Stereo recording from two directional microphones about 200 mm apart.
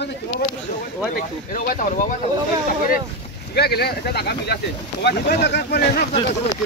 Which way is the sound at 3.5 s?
50° left (ahead or behind).